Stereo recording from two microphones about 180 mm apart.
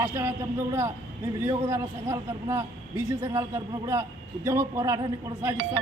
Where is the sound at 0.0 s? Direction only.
15° right (ahead or behind).